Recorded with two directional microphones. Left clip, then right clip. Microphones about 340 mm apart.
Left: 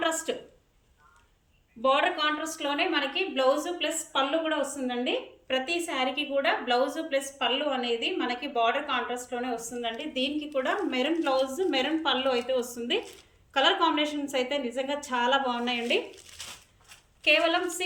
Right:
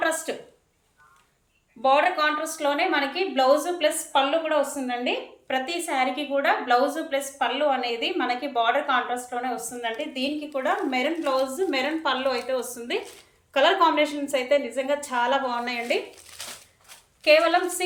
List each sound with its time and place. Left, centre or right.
0.0 s a sound: centre
1.8 s a woman's voice: centre
17.2 s a woman's voice: centre